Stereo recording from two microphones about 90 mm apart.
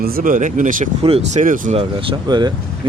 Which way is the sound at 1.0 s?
90° right.